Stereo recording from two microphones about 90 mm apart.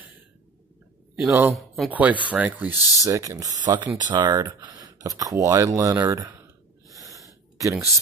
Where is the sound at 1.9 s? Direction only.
20° right (ahead or behind).